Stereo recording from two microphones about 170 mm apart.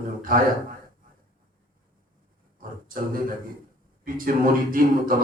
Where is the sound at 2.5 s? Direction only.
55° right (ahead or behind).